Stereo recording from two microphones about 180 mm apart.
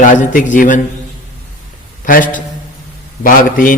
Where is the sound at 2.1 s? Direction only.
50° left (ahead or behind).